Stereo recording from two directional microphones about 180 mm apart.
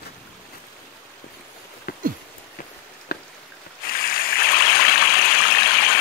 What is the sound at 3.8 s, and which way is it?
Stream, 55° left (ahead or behind).